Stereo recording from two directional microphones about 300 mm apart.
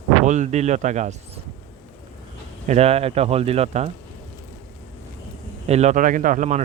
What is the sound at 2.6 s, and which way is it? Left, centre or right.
Speech, right.